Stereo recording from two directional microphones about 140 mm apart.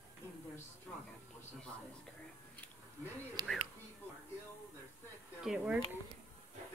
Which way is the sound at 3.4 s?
30° right (ahead or behind).